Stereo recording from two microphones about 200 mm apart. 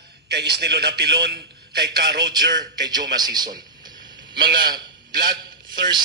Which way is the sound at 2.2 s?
20° right (ahead or behind).